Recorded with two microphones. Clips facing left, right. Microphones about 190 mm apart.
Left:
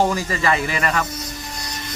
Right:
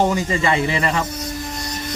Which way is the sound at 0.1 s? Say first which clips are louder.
Right 2 dB; 20° right (ahead or behind).